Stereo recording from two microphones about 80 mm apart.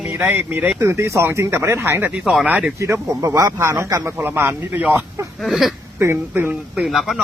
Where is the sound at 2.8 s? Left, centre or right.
Right.